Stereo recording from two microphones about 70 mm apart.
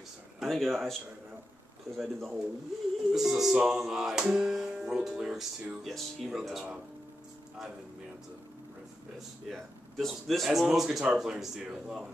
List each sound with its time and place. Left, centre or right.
0.4 s speech: centre
2.0 s speech: centre
5.9 s speech: centre
9.5 s speech: centre